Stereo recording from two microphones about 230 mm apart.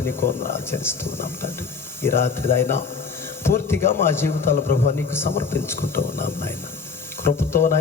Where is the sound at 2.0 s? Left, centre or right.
Centre.